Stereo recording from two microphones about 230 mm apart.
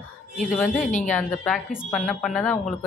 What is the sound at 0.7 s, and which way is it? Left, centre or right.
Speech, left.